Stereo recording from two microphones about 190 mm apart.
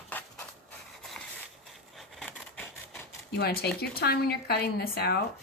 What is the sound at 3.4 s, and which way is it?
A woman's voice, 60° left (ahead or behind).